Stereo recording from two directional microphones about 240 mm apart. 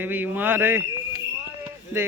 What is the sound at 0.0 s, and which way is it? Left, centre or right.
Speech, centre.